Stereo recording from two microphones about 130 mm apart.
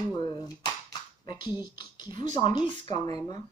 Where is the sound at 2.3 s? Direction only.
35° left (ahead or behind).